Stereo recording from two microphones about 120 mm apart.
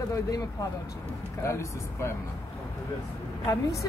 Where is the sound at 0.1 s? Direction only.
30° left (ahead or behind).